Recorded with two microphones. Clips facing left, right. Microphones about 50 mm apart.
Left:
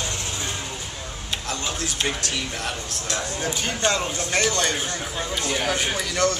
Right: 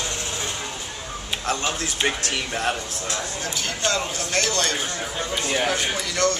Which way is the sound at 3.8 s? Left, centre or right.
Centre.